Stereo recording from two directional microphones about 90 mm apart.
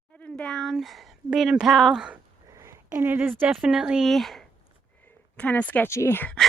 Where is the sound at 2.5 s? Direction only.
30° right (ahead or behind).